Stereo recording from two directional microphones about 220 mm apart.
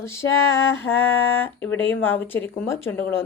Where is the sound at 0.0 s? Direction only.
10° left (ahead or behind).